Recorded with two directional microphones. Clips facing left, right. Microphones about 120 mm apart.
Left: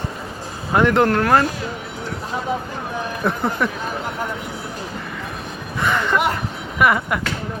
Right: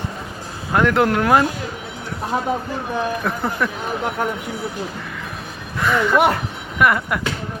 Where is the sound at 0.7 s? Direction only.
Centre (ahead or behind).